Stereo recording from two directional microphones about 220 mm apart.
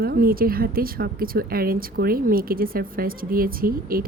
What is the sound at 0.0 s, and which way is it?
Speech, 40° right (ahead or behind).